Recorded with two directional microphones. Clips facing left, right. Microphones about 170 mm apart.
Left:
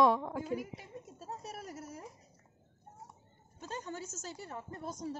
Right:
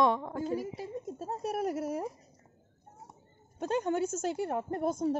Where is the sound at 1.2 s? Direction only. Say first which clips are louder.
Right 13 dB; 60° right (ahead or behind).